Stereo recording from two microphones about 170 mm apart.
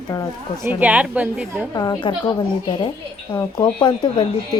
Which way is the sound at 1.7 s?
20° left (ahead or behind).